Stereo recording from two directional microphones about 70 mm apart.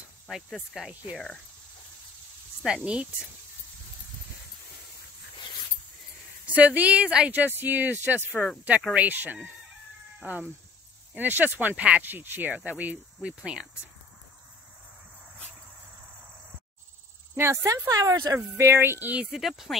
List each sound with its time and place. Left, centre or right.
0.8 s speech: centre
1.1 s speech: centre
2.6 s speech: centre
6.4 s speech: right
7.3 s speech: right
17.4 s speech: right
17.8 s speech: right
18.3 s speech: right
19.3 s speech: centre